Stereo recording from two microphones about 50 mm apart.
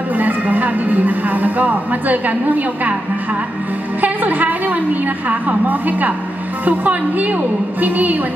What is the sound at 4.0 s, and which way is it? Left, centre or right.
A woman's voice, right.